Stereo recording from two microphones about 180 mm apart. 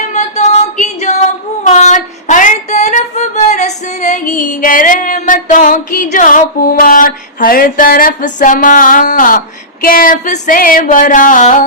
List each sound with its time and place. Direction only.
0.1 s music: 40° left (ahead or behind)
1.6 s female singing: 40° left (ahead or behind)
9.8 s a sound: 50° left (ahead or behind)